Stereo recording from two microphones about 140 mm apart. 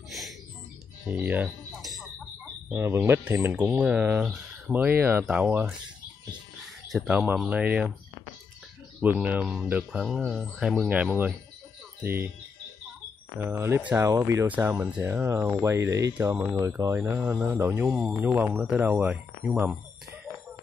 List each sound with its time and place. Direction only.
1.0 s speech: 10° right (ahead or behind)
1.7 s a sound: centre (ahead or behind)
2.7 s speech: 15° right (ahead or behind)
6.9 s speech: centre (ahead or behind)
9.0 s speech: 15° right (ahead or behind)
13.4 s speech: 15° right (ahead or behind)